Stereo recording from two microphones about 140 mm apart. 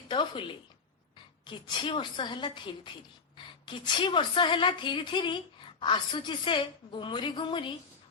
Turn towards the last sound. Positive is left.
turn(degrees=35)  # may be behind; listen again after turning